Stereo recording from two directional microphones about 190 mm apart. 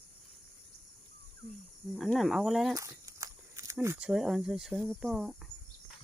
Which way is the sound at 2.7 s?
15° right (ahead or behind).